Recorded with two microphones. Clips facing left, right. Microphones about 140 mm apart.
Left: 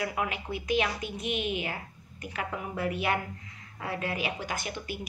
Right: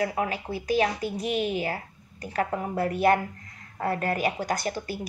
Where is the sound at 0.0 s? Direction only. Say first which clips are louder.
Right 5 dB; 35° right (ahead or behind).